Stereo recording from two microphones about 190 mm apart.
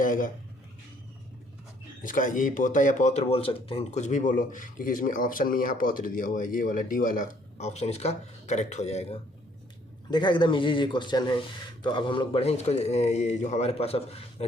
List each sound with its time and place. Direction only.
0.0 s speech: 45° left (ahead or behind)
2.0 s speech: 45° left (ahead or behind)
10.1 s a man's voice: 25° left (ahead or behind)